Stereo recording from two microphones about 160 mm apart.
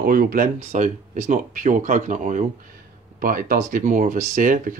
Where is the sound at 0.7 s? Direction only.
50° right (ahead or behind).